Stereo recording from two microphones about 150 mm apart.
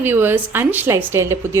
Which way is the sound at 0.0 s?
15° right (ahead or behind).